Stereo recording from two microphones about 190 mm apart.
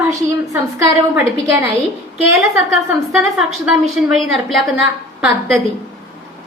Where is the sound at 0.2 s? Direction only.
15° right (ahead or behind).